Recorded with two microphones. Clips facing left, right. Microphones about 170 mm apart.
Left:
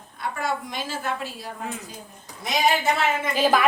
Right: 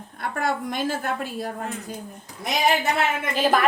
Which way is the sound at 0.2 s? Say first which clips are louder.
Right 2 dB; 55° right (ahead or behind).